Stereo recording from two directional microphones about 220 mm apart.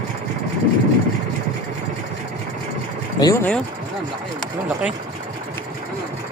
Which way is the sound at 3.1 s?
15° left (ahead or behind).